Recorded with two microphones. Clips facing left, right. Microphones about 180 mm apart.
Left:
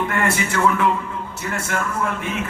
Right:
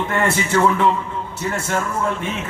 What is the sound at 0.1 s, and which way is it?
Speech, 25° right (ahead or behind).